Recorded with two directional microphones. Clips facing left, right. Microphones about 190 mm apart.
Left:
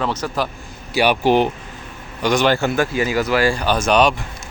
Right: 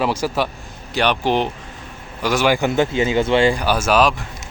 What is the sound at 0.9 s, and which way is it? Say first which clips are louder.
Speech: left 3 dB; 10° left (ahead or behind).